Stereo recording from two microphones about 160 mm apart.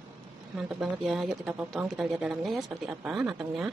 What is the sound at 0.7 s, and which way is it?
Speech, centre (ahead or behind).